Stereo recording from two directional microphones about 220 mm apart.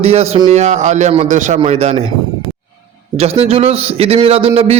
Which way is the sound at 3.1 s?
30° right (ahead or behind).